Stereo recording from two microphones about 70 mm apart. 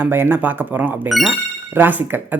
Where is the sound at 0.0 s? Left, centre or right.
Right.